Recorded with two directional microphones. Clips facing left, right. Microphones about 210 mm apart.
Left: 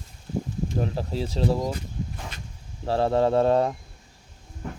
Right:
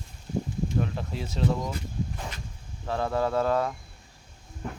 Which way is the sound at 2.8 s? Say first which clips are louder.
Left 6 dB; 30° left (ahead or behind).